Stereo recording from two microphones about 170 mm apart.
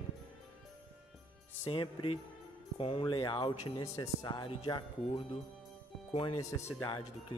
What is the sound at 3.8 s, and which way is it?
Speech, 20° left (ahead or behind).